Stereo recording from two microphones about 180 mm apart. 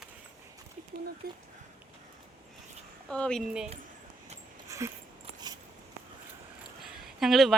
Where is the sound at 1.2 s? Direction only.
60° right (ahead or behind).